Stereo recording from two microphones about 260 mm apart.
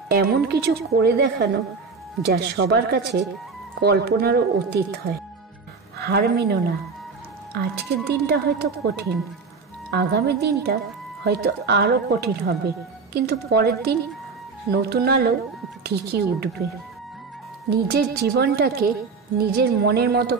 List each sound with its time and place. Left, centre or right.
0.1 s a woman's voice: right
5.9 s a woman's voice: right
17.6 s a woman's voice: right